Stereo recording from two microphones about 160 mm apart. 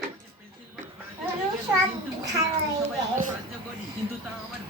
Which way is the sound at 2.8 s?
55° right (ahead or behind).